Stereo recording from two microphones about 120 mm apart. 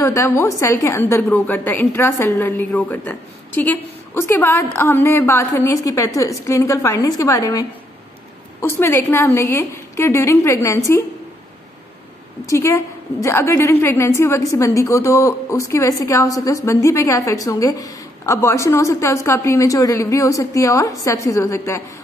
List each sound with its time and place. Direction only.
0.0 s a woman's voice: 20° left (ahead or behind)
12.4 s a woman's voice: 25° left (ahead or behind)